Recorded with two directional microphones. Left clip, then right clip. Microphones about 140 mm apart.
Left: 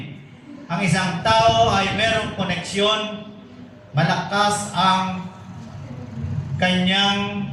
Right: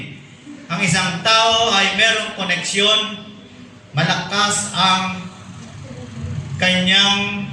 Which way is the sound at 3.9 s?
30° left (ahead or behind).